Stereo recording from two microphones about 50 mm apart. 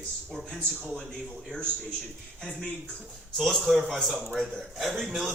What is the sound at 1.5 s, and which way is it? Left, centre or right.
Speech, centre.